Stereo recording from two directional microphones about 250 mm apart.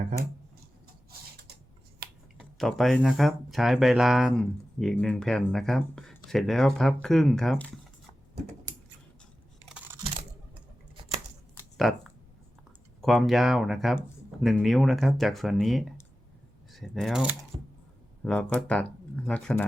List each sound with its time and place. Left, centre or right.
2.4 s speech: centre
9.6 s computer keyboard: centre
11.8 s speech: centre
17.5 s a sound: right
18.2 s speech: centre